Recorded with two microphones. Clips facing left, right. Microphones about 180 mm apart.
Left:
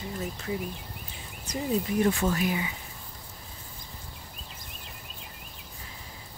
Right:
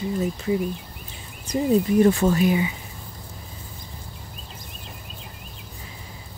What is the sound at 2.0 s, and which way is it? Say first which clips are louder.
Speech: right 6 dB; 35° right (ahead or behind).